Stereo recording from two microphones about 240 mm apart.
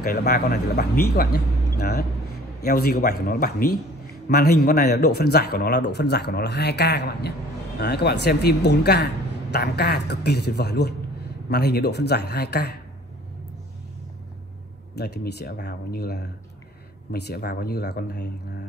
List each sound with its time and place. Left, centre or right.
0.0 s a woman's voice: left
15.0 s a woman's voice: left